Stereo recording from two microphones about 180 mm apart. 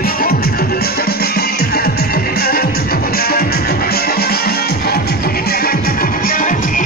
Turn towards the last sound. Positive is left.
turn(degrees=45)  # may be behind; listen again after turning